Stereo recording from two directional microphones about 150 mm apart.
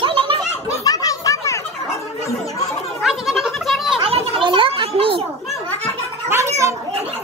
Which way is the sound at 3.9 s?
40° right (ahead or behind).